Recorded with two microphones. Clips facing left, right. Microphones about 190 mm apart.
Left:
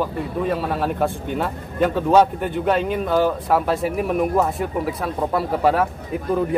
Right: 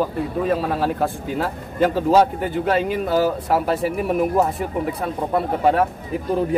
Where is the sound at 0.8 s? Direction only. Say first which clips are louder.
Even; centre (ahead or behind).